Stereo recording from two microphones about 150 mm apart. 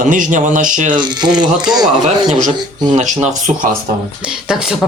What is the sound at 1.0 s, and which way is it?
Speech, 30° right (ahead or behind).